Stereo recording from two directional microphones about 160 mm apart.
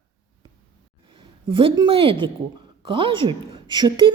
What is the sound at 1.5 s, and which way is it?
A woman's voice, 30° right (ahead or behind).